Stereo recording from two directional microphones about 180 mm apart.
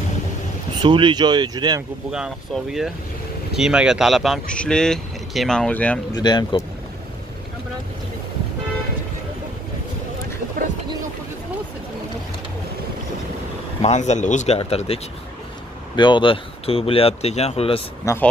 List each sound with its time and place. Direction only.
0.8 s speech: 25° right (ahead or behind)
2.0 s speech: 5° right (ahead or behind)
6.1 s speech: 20° left (ahead or behind)
13.8 s speech: 40° left (ahead or behind)
16.0 s speech: 25° left (ahead or behind)
18.0 s speech: 10° left (ahead or behind)